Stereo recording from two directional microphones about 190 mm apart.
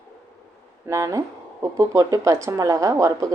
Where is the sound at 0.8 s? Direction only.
15° right (ahead or behind).